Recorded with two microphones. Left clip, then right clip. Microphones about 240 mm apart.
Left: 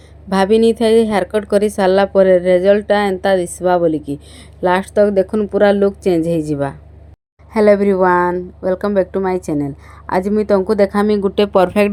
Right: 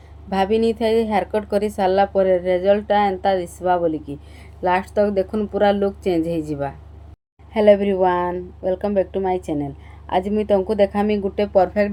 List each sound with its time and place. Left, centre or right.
0.3 s a woman's voice: left
7.6 s a woman's voice: centre
7.9 s speech: left
9.4 s a woman's voice: left
10.5 s speech: left
11.2 s speech: left